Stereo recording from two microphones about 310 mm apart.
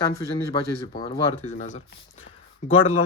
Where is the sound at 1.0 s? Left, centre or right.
Centre.